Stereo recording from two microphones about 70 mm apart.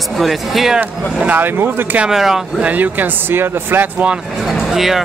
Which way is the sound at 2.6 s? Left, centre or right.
Right.